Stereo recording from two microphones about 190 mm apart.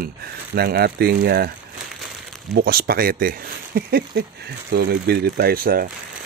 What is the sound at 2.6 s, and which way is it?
Speech, 55° right (ahead or behind).